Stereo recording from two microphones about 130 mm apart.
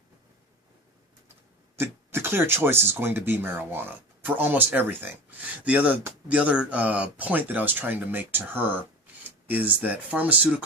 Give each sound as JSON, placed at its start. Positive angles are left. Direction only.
{"t": 1.7, "sound": "speech", "side_deg": -15}